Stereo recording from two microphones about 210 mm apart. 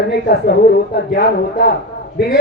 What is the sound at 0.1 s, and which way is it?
A woman's voice, 50° left (ahead or behind).